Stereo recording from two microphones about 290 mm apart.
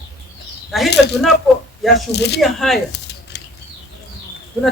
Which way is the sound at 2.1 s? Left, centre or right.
Left.